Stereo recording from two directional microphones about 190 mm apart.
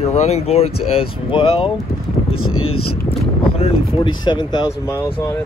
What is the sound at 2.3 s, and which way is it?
Speech, 90° left.